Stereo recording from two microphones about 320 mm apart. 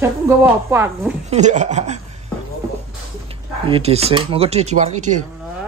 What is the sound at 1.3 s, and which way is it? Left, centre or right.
Speech, right.